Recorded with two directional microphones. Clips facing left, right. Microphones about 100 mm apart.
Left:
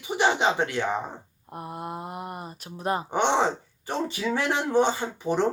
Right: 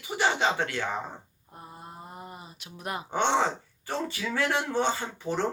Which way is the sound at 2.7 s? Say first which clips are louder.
Left 7 dB; 30° left (ahead or behind).